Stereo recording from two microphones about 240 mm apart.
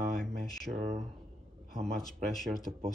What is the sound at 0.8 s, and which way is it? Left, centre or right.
Speech, right.